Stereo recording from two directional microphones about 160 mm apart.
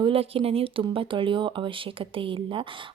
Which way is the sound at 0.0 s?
35° right (ahead or behind).